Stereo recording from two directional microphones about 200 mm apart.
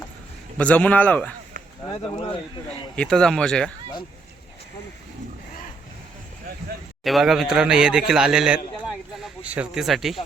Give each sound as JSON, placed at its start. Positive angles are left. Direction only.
{"t": 0.5, "sound": "a man's voice", "side_deg": 5}
{"t": 2.1, "sound": "speech", "side_deg": 25}
{"t": 2.9, "sound": "speech", "side_deg": 5}
{"t": 7.0, "sound": "a man's voice", "side_deg": 0}